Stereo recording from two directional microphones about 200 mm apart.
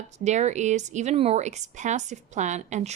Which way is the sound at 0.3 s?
35° right (ahead or behind).